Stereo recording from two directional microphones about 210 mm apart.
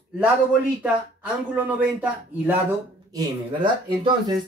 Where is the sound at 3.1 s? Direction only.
20° right (ahead or behind).